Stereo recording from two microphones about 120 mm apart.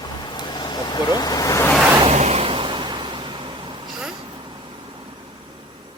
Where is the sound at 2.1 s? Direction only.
65° right (ahead or behind); by 3.8 s 40° right (ahead or behind).